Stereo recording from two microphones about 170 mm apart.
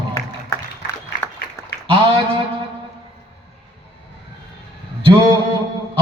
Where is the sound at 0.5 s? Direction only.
15° left (ahead or behind).